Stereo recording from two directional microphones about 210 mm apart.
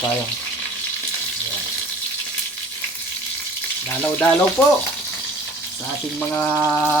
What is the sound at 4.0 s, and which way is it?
Speech, 10° left (ahead or behind).